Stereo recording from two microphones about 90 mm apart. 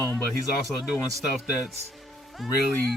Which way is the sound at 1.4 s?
5° right (ahead or behind).